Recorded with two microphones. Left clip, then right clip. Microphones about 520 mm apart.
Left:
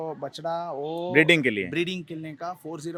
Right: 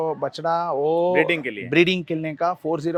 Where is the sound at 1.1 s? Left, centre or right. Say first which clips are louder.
Left 1 dB; left.